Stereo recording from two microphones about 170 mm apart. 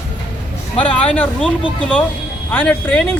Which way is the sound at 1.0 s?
10° left (ahead or behind).